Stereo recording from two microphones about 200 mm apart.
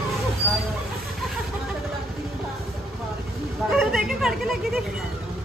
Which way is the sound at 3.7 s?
Centre (ahead or behind).